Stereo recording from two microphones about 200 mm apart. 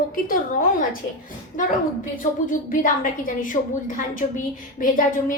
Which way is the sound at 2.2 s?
40° left (ahead or behind).